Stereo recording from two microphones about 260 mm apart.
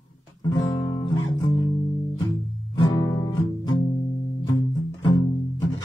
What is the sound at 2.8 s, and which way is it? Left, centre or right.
Music, centre.